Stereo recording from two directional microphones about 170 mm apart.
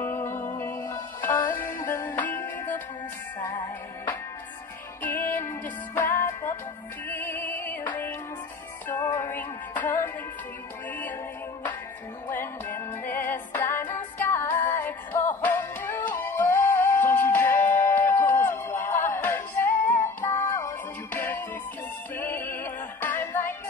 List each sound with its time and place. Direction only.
0.0 s music: 15° left (ahead or behind)
9.0 s music: 20° left (ahead or behind)
12.3 s music: 15° left (ahead or behind)